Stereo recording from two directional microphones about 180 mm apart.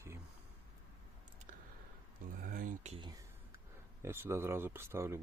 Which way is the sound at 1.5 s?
45° right (ahead or behind).